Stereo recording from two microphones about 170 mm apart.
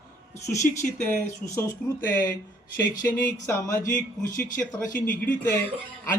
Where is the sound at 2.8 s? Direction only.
55° left (ahead or behind).